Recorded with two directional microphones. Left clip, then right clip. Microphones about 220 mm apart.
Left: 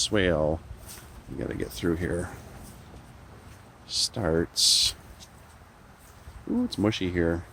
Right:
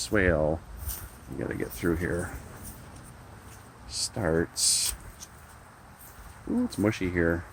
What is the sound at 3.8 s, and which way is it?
Speech, 25° left (ahead or behind).